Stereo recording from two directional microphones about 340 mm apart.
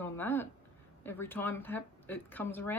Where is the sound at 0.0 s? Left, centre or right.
Centre.